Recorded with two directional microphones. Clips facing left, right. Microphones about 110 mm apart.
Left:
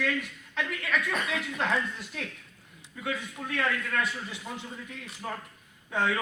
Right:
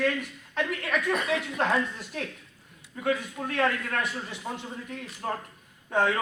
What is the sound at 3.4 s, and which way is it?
Speech, 40° right (ahead or behind).